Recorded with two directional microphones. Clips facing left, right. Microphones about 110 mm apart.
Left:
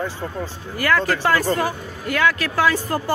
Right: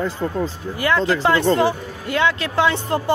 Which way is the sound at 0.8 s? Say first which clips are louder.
Right 1 dB; 25° right (ahead or behind).